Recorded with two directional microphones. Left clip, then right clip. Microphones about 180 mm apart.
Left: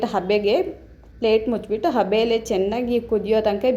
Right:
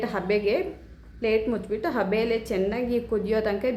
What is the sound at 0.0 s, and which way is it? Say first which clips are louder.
A woman's voice: left 5 dB; 20° left (ahead or behind).